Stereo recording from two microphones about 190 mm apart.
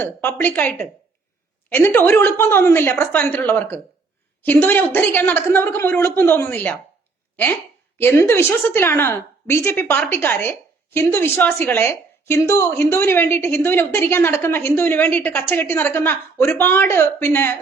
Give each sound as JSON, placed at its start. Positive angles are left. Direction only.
{"t": 0.0, "sound": "a woman's voice", "side_deg": 10}
{"t": 7.9, "sound": "a woman's voice", "side_deg": 15}